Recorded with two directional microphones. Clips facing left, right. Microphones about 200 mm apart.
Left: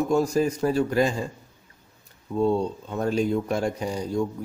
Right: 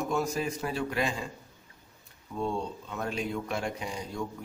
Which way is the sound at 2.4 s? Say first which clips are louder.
Left 9 dB; 40° left (ahead or behind).